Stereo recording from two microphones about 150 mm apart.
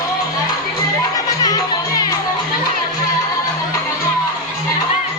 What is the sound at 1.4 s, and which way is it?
Music, 25° left (ahead or behind).